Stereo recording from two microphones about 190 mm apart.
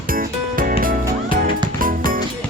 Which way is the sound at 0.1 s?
45° right (ahead or behind).